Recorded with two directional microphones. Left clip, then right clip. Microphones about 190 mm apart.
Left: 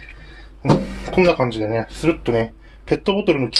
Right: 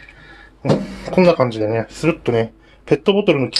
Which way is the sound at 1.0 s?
40° right (ahead or behind).